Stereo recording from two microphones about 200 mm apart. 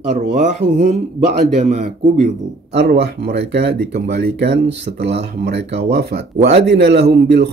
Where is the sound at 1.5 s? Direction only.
35° right (ahead or behind).